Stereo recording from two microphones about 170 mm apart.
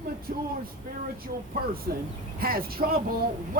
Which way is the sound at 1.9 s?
60° right (ahead or behind).